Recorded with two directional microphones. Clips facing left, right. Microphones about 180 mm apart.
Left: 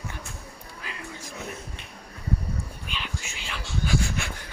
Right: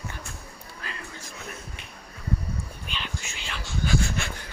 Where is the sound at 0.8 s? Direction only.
10° left (ahead or behind).